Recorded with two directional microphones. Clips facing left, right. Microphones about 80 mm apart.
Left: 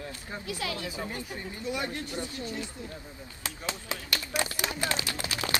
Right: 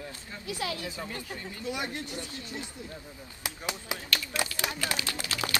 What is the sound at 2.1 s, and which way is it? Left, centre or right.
Speech, left.